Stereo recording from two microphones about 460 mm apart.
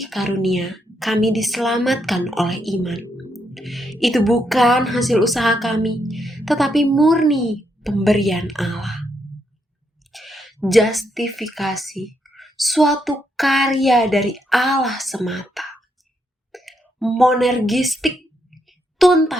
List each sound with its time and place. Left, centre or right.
0.0 s a woman's voice: centre
10.1 s a woman's voice: centre
18.5 s a sound: centre